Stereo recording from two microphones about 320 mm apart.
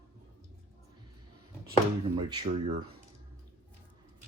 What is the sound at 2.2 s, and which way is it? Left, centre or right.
Speech, centre.